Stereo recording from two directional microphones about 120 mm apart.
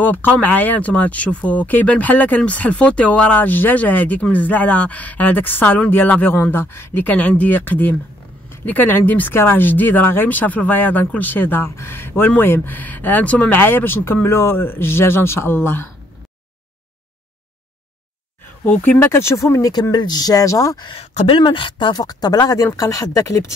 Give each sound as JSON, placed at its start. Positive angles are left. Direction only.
{"t": 0.0, "sound": "speech", "side_deg": 15}
{"t": 18.7, "sound": "speech", "side_deg": 15}
{"t": 21.3, "sound": "speech", "side_deg": 45}